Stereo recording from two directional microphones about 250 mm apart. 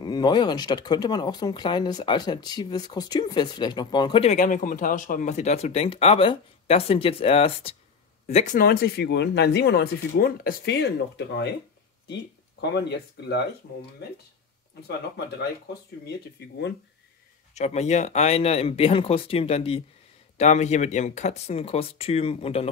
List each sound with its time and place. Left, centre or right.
0.0 s speech: centre; by 13.4 s left
16.1 s speech: left
17.6 s speech: left